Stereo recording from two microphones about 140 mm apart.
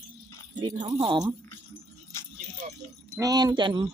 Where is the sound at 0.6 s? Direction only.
30° right (ahead or behind).